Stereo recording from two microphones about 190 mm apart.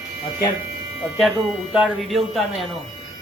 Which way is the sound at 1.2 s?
Centre (ahead or behind).